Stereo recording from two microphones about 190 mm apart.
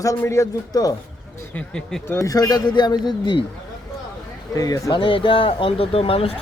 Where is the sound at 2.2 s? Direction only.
20° left (ahead or behind).